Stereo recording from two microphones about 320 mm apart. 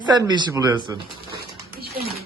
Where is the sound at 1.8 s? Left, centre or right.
Right.